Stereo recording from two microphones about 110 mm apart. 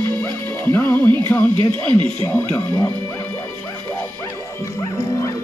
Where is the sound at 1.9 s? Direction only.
50° right (ahead or behind).